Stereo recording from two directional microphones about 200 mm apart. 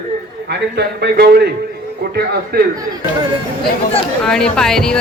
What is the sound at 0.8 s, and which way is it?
Speech, 55° right (ahead or behind).